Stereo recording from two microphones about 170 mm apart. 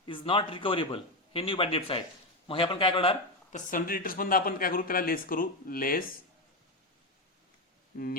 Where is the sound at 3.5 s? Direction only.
55° left (ahead or behind).